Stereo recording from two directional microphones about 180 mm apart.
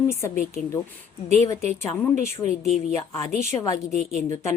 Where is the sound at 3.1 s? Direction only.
15° left (ahead or behind).